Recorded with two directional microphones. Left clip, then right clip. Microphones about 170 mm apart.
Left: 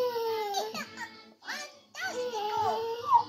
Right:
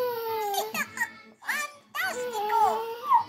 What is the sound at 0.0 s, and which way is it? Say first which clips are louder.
Music: right 1 dB; 20° right (ahead or behind).